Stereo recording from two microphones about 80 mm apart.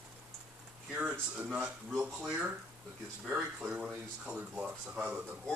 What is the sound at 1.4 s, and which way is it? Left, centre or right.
Speech, centre.